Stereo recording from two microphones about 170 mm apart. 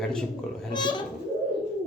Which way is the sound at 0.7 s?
25° left (ahead or behind).